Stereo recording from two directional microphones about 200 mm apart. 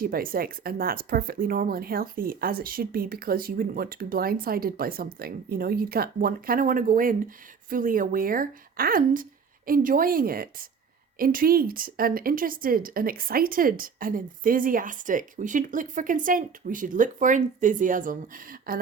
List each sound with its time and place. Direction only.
0.0 s a woman's voice: 45° right (ahead or behind)